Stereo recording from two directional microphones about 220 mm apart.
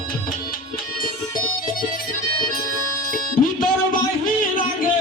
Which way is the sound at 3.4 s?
40° left (ahead or behind).